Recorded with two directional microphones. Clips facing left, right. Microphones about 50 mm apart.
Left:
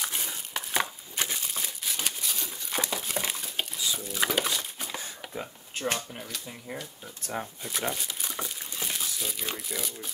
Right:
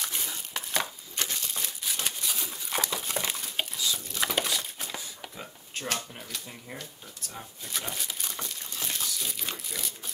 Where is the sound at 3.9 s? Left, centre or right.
Centre.